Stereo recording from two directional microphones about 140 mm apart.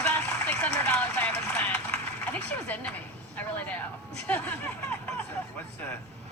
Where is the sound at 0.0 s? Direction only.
10° left (ahead or behind).